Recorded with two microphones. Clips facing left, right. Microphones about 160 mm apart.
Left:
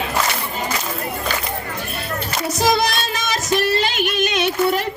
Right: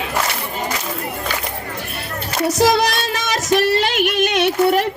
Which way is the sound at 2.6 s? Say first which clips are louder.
Right 2 dB; 75° right (ahead or behind).